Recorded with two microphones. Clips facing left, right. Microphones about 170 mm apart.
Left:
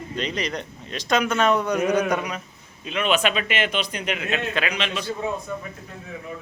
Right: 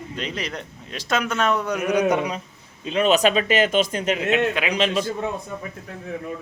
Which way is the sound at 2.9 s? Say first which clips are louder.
Right 4 dB; 40° right (ahead or behind).